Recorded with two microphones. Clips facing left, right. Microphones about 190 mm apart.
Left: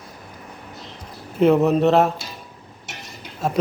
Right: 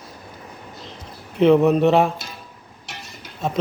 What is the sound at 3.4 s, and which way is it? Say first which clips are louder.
Speech: left 1 dB; 5° left (ahead or behind).